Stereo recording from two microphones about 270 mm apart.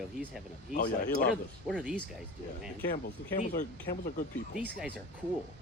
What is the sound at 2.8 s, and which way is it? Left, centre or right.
Speech, left.